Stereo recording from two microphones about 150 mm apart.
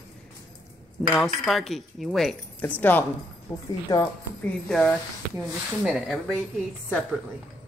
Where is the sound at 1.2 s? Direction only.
Centre (ahead or behind).